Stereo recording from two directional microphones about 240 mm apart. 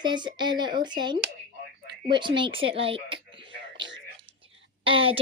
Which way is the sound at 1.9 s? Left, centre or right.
Centre.